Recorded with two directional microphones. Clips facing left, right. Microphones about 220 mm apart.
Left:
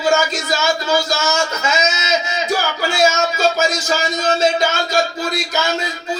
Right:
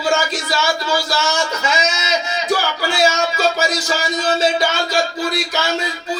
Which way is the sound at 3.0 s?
45° left (ahead or behind).